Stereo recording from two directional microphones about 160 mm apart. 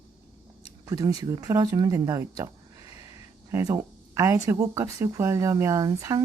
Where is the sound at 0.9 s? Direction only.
20° right (ahead or behind).